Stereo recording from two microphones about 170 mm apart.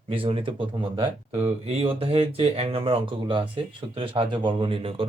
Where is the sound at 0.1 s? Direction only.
30° right (ahead or behind).